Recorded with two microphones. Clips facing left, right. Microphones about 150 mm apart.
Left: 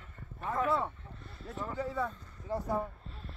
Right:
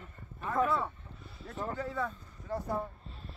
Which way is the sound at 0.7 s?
25° left (ahead or behind).